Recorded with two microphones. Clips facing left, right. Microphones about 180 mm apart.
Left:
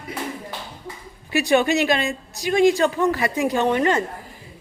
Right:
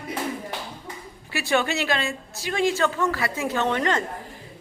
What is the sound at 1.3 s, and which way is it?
A woman's voice, 15° left (ahead or behind).